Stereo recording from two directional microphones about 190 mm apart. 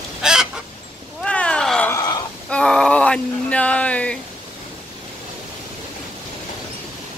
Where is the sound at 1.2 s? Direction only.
5° left (ahead or behind).